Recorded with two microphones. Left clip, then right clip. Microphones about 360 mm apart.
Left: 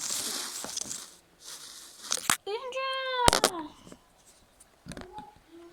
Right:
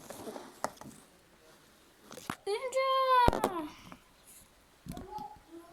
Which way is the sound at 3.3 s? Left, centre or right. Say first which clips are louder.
Left 6 dB; left.